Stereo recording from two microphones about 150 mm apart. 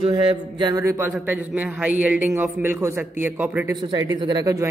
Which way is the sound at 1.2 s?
10° right (ahead or behind).